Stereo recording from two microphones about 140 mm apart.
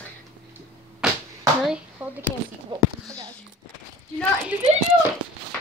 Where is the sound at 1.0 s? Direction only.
5° right (ahead or behind).